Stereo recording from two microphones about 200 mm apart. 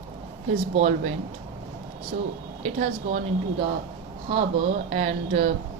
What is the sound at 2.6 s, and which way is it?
Speech, 35° right (ahead or behind).